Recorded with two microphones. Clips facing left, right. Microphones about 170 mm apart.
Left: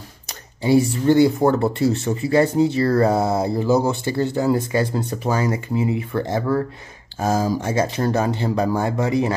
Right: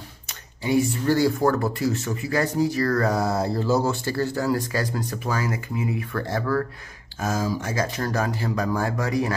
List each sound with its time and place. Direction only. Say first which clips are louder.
0.3 s a sound: left 6 dB; 30° left (ahead or behind)
1.1 s speech: left 5 dB; 20° left (ahead or behind)
7.2 s speech: left 5 dB; 35° left (ahead or behind)